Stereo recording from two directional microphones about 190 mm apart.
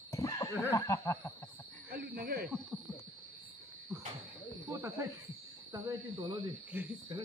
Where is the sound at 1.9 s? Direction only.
55° right (ahead or behind).